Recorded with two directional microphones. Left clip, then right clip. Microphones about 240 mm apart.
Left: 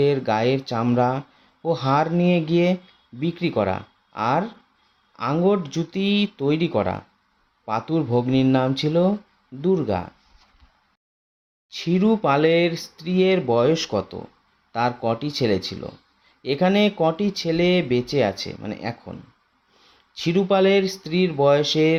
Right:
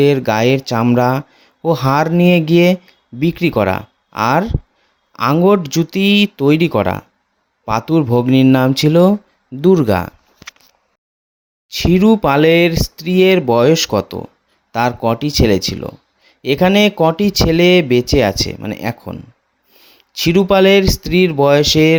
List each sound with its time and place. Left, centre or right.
0.0 s speech: right
11.7 s speech: right